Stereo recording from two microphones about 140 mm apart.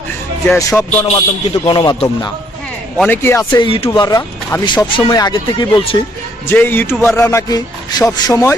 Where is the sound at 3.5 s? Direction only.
35° left (ahead or behind).